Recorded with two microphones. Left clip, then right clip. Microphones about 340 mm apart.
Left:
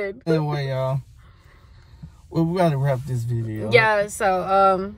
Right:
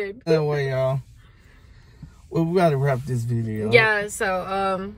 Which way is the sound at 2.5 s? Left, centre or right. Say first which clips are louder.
Right 2 dB; centre.